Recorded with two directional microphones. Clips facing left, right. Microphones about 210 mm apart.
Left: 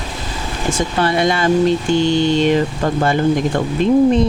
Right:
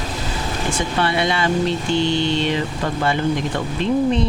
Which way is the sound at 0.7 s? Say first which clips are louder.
Left 4 dB; 45° left (ahead or behind).